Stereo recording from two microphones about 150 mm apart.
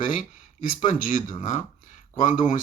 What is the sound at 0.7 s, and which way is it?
A man's voice, 65° left (ahead or behind).